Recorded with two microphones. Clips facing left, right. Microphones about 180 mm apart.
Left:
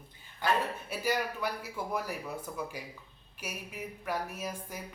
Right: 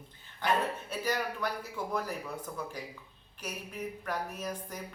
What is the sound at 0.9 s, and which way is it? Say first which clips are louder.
A woman's voice: left 1 dB; 10° left (ahead or behind).